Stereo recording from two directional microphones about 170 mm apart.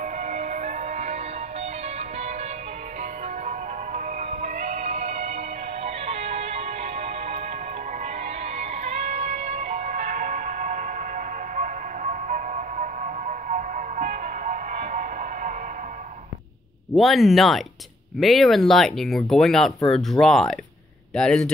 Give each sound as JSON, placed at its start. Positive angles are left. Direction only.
{"t": 0.0, "sound": "music", "side_deg": -45}
{"t": 3.0, "sound": "music", "side_deg": -45}
{"t": 8.5, "sound": "music", "side_deg": -40}
{"t": 16.9, "sound": "speech", "side_deg": 0}